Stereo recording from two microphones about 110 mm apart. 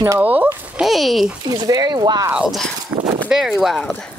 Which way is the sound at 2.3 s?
5° right (ahead or behind).